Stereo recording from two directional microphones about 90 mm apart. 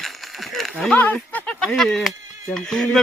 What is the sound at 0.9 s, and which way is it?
Speech, 20° left (ahead or behind).